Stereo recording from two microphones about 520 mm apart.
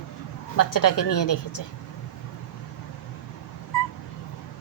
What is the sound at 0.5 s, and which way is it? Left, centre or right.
A woman's voice, left.